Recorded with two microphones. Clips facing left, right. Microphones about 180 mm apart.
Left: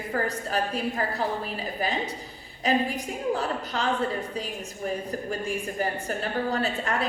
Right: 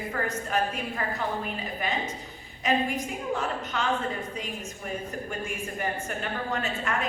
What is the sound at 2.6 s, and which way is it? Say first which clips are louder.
A woman's voice: left 1 dB; 35° left (ahead or behind).